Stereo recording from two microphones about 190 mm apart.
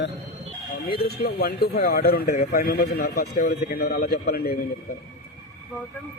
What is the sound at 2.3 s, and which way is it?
A man's voice, 40° left (ahead or behind).